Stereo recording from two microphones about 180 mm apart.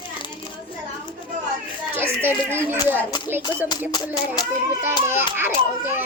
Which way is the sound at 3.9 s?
25° left (ahead or behind).